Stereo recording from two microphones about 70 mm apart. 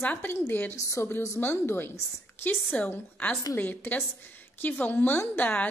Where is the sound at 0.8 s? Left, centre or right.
Left.